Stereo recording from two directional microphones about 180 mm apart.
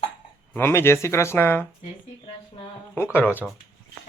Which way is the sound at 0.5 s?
15° left (ahead or behind).